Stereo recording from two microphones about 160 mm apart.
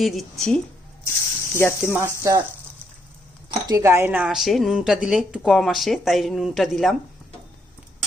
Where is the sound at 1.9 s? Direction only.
20° right (ahead or behind).